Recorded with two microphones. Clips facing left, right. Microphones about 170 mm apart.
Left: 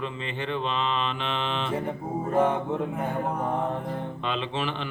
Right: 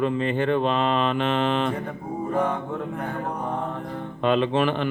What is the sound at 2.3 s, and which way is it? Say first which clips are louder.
Speech: left 3 dB; 20° left (ahead or behind).